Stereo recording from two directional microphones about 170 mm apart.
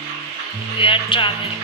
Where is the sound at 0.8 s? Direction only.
30° left (ahead or behind).